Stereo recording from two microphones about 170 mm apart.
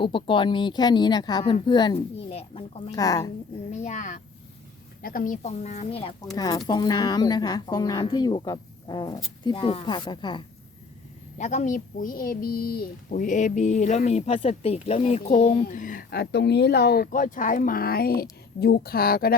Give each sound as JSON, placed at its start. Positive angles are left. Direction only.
{"t": 0.0, "sound": "speech", "side_deg": 30}
{"t": 2.9, "sound": "speech", "side_deg": 20}
{"t": 3.7, "sound": "speech", "side_deg": 45}
{"t": 6.3, "sound": "speech", "side_deg": 20}
{"t": 11.3, "sound": "speech", "side_deg": 45}